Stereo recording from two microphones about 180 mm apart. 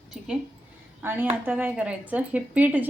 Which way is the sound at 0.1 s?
5° right (ahead or behind).